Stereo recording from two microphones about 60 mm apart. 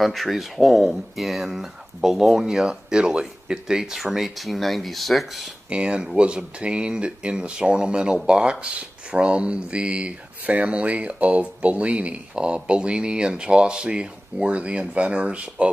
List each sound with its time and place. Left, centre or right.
0.0 s speech: centre
5.7 s speech: centre